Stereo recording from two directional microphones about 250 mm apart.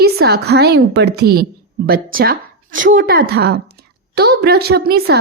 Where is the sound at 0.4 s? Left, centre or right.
Right.